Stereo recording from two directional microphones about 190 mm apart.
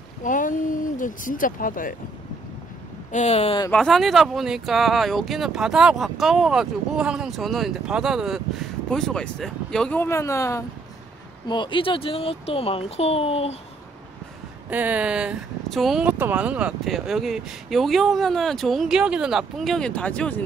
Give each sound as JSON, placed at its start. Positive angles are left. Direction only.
{"t": 0.2, "sound": "a sound", "side_deg": 45}
{"t": 3.1, "sound": "speech", "side_deg": 35}
{"t": 3.7, "sound": "speech", "side_deg": 0}
{"t": 14.7, "sound": "speech", "side_deg": -10}